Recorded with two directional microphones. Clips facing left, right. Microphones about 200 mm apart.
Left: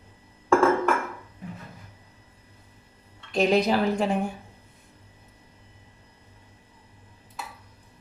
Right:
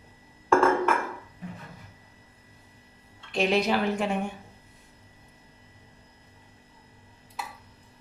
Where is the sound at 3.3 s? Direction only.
40° left (ahead or behind).